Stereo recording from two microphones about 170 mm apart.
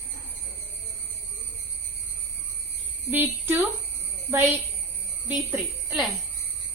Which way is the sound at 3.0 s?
10° right (ahead or behind).